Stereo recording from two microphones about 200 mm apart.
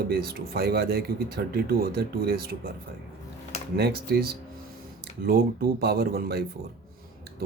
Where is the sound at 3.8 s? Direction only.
55° right (ahead or behind).